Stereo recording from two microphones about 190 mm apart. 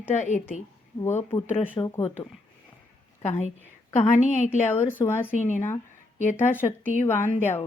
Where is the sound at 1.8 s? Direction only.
30° left (ahead or behind).